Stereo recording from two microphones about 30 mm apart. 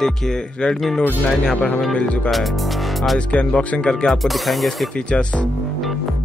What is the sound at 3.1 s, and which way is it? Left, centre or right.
Speech, left.